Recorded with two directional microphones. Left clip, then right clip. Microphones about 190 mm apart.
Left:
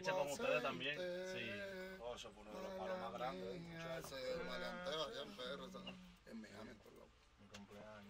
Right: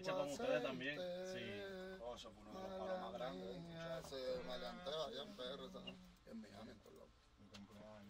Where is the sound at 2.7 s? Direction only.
20° left (ahead or behind).